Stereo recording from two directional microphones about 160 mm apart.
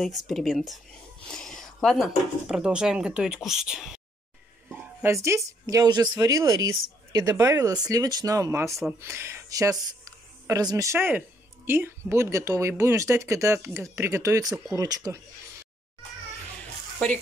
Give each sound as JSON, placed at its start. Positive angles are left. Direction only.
{"t": 0.0, "sound": "speech", "side_deg": 0}
{"t": 4.6, "sound": "speech", "side_deg": -15}